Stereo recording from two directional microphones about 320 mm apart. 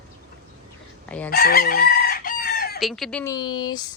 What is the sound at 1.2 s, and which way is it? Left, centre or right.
Chicken, left.